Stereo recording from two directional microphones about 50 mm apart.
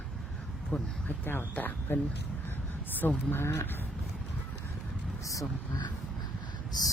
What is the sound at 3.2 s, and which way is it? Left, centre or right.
Speech, left.